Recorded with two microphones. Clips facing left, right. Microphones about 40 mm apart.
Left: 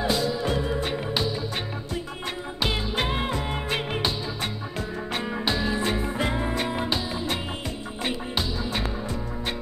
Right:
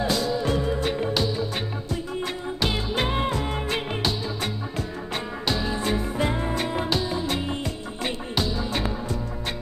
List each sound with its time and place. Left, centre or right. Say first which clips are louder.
0.0 s music: right 1 dB; centre
2.6 s music: right 1 dB; centre
3.3 s music: right 1 dB; centre